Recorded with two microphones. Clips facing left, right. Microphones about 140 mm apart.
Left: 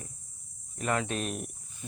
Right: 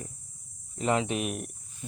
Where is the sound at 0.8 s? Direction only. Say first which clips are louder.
Right 3 dB; 20° right (ahead or behind).